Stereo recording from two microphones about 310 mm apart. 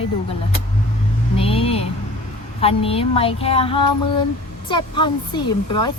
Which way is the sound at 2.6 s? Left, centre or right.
Centre.